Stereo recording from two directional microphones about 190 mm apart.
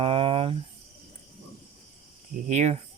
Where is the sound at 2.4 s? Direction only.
40° right (ahead or behind).